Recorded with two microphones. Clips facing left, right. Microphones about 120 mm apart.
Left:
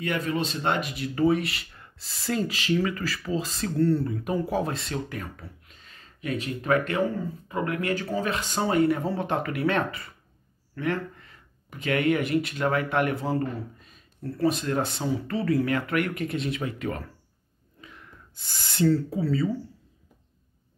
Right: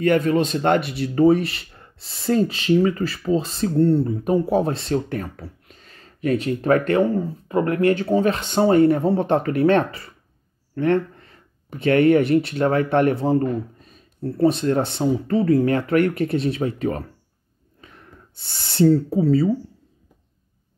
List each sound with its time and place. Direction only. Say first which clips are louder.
0.0 s speech: right 10 dB; 40° right (ahead or behind)
7.4 s speech: right 10 dB; 45° right (ahead or behind)
8.1 s speech: right 9 dB; 30° right (ahead or behind)
13.2 s speech: right 8 dB; 25° right (ahead or behind)
13.7 s a sound: right 9 dB; 40° right (ahead or behind)
14.3 s speech: right 7 dB; 25° right (ahead or behind)
17.7 s snort: right 1 dB; 40° right (ahead or behind)
18.5 s speech: right 6 dB; 30° right (ahead or behind)